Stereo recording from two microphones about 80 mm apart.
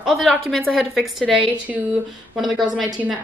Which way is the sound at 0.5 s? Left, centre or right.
Centre.